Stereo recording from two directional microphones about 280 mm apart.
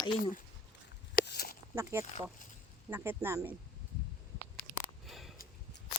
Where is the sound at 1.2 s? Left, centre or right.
Left.